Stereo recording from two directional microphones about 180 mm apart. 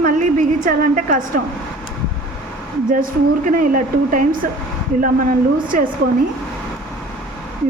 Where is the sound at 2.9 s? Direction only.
50° right (ahead or behind).